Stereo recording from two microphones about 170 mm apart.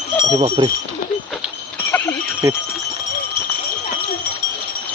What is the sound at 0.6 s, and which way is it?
Speech, 30° right (ahead or behind).